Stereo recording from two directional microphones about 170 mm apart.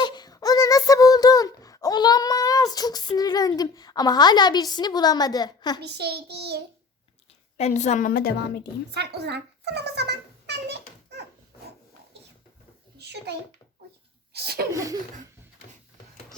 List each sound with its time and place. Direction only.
0.0 s a sound: 25° left (ahead or behind)
5.8 s a child's voice: 75° right (ahead or behind)
7.5 s a woman's voice: 45° left (ahead or behind); by 8.7 s 75° left (ahead or behind)
8.9 s a child's voice: 75° right (ahead or behind)
13.0 s a sound: 75° right (ahead or behind)
14.3 s a child's voice: 65° right (ahead or behind)